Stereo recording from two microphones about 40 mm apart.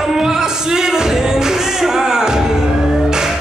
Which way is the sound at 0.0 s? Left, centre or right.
Centre.